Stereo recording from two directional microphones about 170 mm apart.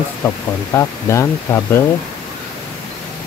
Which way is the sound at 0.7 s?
15° left (ahead or behind).